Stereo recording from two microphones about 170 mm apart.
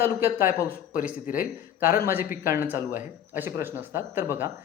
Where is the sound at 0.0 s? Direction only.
15° right (ahead or behind).